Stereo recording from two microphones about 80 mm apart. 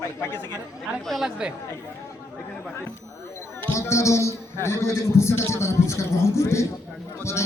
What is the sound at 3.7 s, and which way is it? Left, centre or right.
A man's voice, left.